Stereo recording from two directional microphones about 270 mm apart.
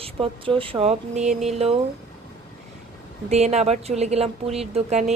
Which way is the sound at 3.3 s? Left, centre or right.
Right.